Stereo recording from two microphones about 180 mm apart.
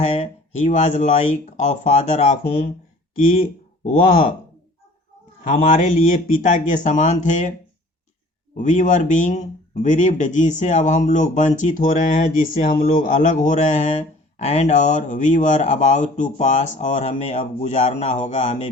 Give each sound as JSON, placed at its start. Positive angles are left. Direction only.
{"t": 0.0, "sound": "speech", "side_deg": 40}
{"t": 5.4, "sound": "speech", "side_deg": 45}
{"t": 8.5, "sound": "speech", "side_deg": 45}